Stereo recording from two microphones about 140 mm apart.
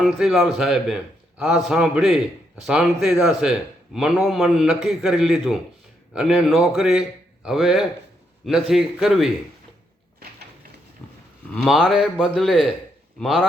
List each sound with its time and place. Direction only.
0.0 s a man's voice: centre (ahead or behind)
11.0 s livestock: 10° left (ahead or behind)
11.6 s a man's voice: centre (ahead or behind)